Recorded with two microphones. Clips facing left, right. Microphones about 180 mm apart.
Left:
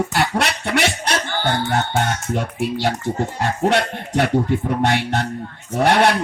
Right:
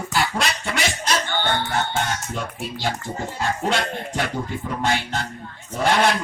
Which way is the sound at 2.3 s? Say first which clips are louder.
Left 7 dB; 65° left (ahead or behind).